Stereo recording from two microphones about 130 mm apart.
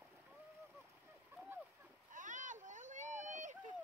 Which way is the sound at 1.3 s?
15° right (ahead or behind).